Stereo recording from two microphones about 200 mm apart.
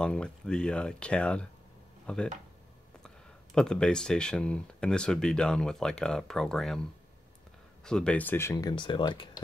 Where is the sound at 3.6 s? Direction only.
5° left (ahead or behind).